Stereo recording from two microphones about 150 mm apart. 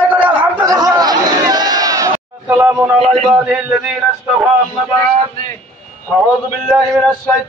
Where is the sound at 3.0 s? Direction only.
45° right (ahead or behind).